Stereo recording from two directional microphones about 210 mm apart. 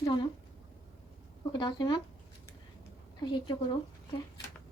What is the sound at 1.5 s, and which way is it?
Speech, 20° left (ahead or behind).